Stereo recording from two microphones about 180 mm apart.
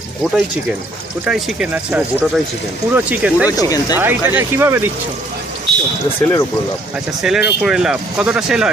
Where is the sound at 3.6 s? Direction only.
20° left (ahead or behind).